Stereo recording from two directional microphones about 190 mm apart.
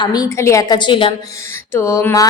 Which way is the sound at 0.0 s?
20° left (ahead or behind).